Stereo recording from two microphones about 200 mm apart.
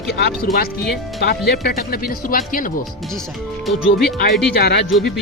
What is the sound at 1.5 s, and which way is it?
Speech, 50° left (ahead or behind).